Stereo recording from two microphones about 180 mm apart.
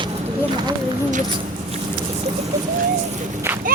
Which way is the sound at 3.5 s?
10° right (ahead or behind).